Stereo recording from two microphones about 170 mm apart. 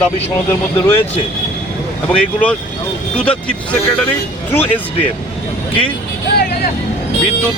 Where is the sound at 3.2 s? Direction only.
5° left (ahead or behind).